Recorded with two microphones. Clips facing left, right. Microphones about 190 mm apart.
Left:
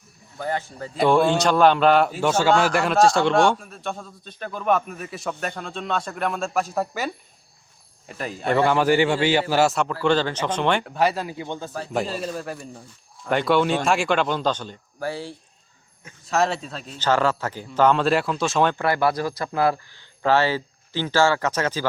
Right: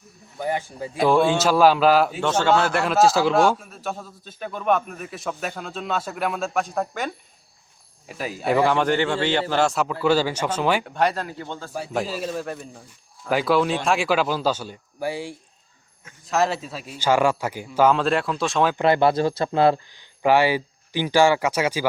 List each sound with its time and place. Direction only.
0.3 s speech: 15° right (ahead or behind)
0.9 s a man's voice: centre (ahead or behind); by 11.7 s 15° left (ahead or behind)
11.7 s a man's voice: 5° right (ahead or behind)
16.2 s a man's voice: centre (ahead or behind)
18.8 s speech: 25° right (ahead or behind)